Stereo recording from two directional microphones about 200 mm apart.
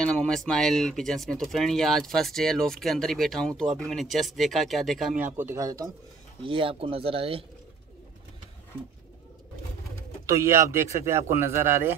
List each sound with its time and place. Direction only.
0.0 s speech: 5° left (ahead or behind); by 7.4 s 25° right (ahead or behind)
10.2 s a man's voice: 15° right (ahead or behind)